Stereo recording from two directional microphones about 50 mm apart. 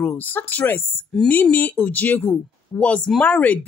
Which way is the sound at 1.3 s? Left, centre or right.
Left.